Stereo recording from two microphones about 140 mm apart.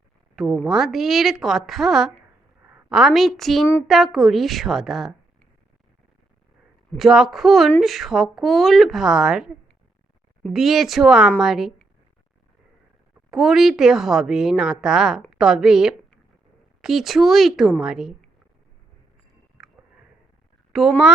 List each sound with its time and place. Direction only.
0.6 s a woman's voice: 5° right (ahead or behind)
6.9 s a woman's voice: 5° right (ahead or behind)
13.3 s a woman's voice: 5° right (ahead or behind)
19.6 s a sound: 5° right (ahead or behind)
20.7 s speech: 5° right (ahead or behind)